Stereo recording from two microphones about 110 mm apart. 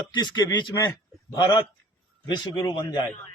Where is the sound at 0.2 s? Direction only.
40° left (ahead or behind).